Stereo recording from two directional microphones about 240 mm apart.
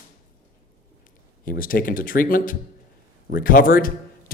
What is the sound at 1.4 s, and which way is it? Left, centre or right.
Speech, left.